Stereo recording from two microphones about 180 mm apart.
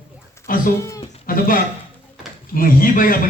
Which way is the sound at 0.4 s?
50° left (ahead or behind).